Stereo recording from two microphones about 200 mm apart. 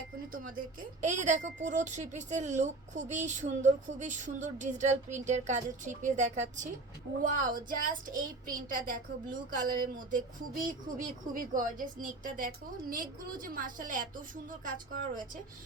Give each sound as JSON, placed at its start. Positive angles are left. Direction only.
{"t": 0.3, "sound": "a woman's voice", "side_deg": -40}